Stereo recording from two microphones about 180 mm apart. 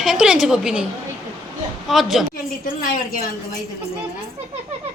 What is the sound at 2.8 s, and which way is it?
Speech, 50° left (ahead or behind).